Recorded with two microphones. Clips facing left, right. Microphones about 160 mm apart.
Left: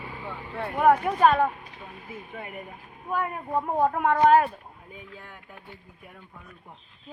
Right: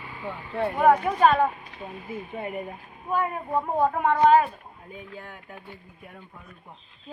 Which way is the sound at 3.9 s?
5° left (ahead or behind).